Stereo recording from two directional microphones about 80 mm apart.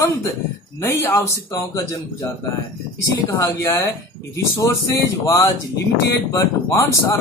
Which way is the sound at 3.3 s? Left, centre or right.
Left.